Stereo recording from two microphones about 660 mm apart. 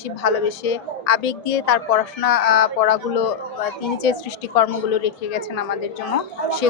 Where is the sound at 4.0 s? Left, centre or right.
Left.